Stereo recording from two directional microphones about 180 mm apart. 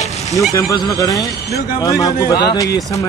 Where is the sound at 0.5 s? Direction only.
20° left (ahead or behind).